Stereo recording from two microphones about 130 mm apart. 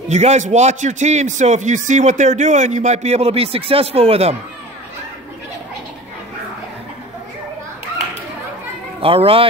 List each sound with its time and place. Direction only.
0.1 s a man's voice: 60° right (ahead or behind)
9.0 s speech: 45° right (ahead or behind)